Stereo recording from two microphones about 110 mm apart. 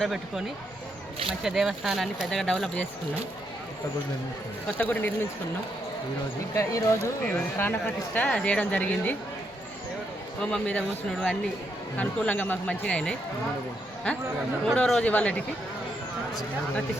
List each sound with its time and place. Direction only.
0.0 s speech: 5° right (ahead or behind)
1.5 s speech: centre (ahead or behind)
4.8 s speech: 15° left (ahead or behind)
6.5 s speech: 30° left (ahead or behind)
7.3 s speech: 15° left (ahead or behind)
10.4 s speech: 10° left (ahead or behind)
14.6 s speech: 5° left (ahead or behind)